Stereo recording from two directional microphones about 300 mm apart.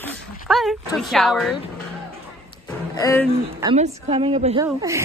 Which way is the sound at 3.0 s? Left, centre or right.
Centre.